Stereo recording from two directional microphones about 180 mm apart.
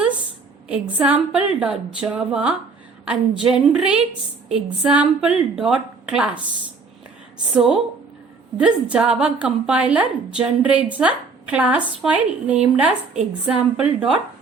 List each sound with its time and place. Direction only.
0.7 s a woman's voice: 5° right (ahead or behind)
7.5 s a woman's voice: 5° right (ahead or behind)